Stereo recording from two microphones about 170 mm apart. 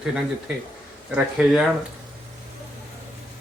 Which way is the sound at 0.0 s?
5° right (ahead or behind).